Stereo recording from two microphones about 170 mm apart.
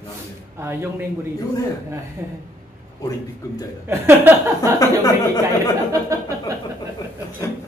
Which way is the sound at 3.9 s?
15° right (ahead or behind).